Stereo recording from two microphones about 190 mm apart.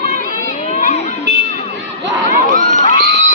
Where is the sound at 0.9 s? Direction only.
35° left (ahead or behind).